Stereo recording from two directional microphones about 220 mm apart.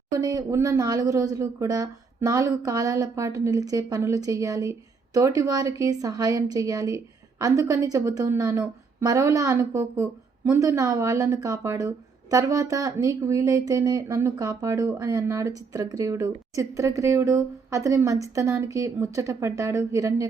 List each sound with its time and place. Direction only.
0.1 s a woman's voice: 15° right (ahead or behind)